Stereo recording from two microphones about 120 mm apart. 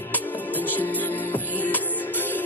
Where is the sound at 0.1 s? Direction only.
15° left (ahead or behind).